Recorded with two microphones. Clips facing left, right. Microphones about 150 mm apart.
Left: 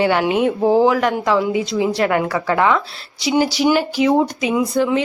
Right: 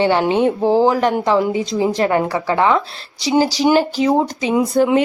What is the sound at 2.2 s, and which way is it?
Speech, 15° right (ahead or behind).